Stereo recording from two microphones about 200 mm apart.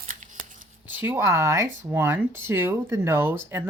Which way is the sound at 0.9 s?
10° right (ahead or behind).